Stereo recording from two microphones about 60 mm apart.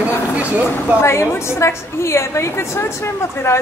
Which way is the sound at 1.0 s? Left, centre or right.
Left.